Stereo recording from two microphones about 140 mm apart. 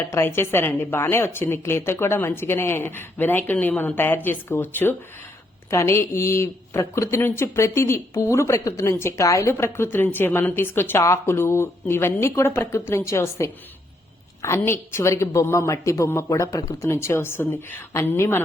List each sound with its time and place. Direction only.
0.1 s a woman's voice: 15° left (ahead or behind)